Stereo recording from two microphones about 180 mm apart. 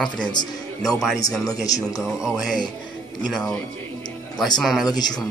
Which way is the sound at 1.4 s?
20° left (ahead or behind).